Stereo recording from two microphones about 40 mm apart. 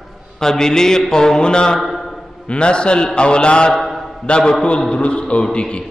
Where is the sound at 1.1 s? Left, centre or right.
Centre.